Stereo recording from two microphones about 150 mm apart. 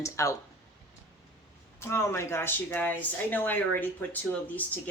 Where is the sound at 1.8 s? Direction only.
15° left (ahead or behind).